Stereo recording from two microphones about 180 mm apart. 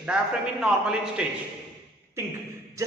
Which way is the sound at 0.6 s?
5° right (ahead or behind).